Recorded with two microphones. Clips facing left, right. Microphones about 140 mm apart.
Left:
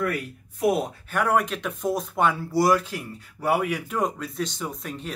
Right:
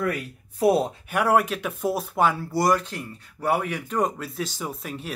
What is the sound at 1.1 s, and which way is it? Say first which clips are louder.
Speech: right 2 dB; 5° right (ahead or behind).